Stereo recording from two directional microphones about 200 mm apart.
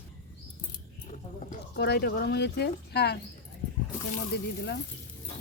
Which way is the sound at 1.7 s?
55° left (ahead or behind).